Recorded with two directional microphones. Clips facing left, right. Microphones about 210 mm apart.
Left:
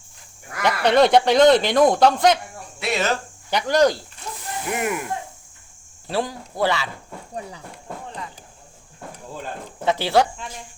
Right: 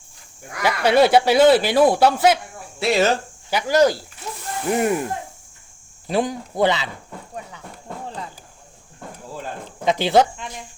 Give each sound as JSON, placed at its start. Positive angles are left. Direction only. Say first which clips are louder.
{"t": 0.5, "sound": "speech", "louder": "right 1 dB", "side_deg": -5}
{"t": 2.8, "sound": "speech", "louder": "right 5 dB", "side_deg": -30}
{"t": 3.5, "sound": "speech", "louder": "right 1 dB", "side_deg": -5}
{"t": 4.7, "sound": "speech", "louder": "right 6 dB", "side_deg": -35}
{"t": 6.1, "sound": "speech", "louder": "right 4 dB", "side_deg": -20}
{"t": 9.8, "sound": "speech", "louder": "right 2 dB", "side_deg": -15}